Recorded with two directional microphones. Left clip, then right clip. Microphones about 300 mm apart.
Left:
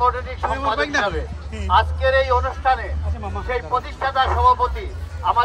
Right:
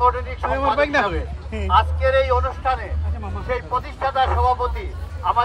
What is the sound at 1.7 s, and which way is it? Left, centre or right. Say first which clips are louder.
A man's voice: even; centre.